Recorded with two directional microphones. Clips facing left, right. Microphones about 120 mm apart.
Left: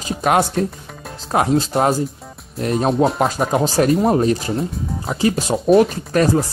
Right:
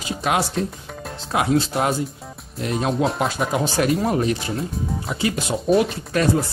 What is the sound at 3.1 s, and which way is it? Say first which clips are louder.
Speech: left 4 dB; 40° left (ahead or behind).